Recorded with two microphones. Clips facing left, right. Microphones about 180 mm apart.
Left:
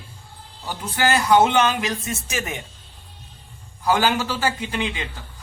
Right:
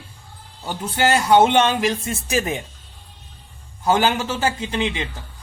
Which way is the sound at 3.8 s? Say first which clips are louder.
Right 1 dB; 25° right (ahead or behind).